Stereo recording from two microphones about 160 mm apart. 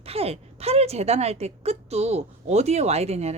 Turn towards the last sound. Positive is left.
turn(degrees=-40)  # may be behind; listen again after turning